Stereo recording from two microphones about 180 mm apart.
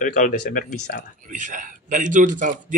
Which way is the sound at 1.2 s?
45° right (ahead or behind).